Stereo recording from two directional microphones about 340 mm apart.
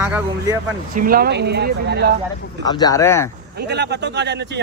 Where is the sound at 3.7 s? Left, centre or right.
Right.